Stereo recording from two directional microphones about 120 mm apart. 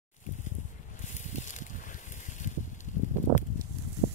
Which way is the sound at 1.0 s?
80° left.